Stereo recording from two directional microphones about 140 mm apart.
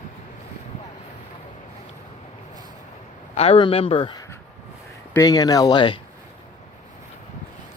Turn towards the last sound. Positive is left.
turn(degrees=35)  # may be behind; listen again after turning